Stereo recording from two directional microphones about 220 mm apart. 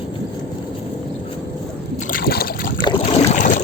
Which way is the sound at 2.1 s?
45° left (ahead or behind).